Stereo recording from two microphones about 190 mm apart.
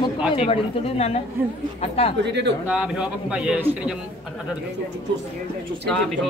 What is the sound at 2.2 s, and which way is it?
Speech, 65° right (ahead or behind).